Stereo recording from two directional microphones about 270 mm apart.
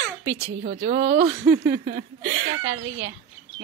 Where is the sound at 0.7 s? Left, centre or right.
Right.